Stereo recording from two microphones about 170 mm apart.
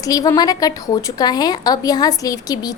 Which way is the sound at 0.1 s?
20° left (ahead or behind).